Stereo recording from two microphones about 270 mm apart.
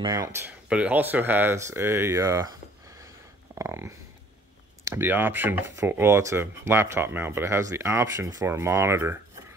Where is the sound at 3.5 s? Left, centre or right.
Centre.